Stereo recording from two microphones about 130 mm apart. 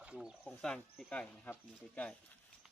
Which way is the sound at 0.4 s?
5° left (ahead or behind).